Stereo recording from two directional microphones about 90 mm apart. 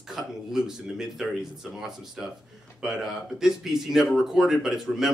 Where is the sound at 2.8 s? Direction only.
5° right (ahead or behind).